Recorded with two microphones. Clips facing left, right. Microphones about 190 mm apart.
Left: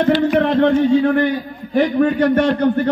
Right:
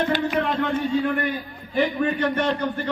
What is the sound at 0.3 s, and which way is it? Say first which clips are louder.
A man's voice: left 9 dB; 65° left (ahead or behind).